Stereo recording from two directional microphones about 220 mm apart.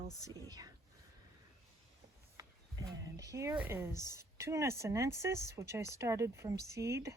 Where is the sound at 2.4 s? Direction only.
15° right (ahead or behind).